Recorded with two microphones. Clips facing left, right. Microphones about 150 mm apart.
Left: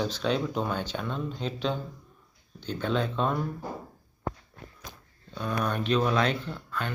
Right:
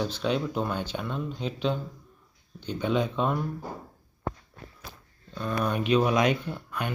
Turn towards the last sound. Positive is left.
turn(degrees=-15)  # may be behind; listen again after turning